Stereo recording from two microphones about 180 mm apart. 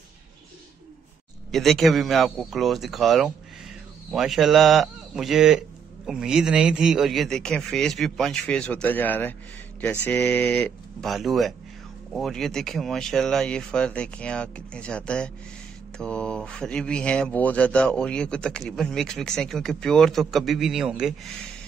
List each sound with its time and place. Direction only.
1.5 s speech: centre (ahead or behind)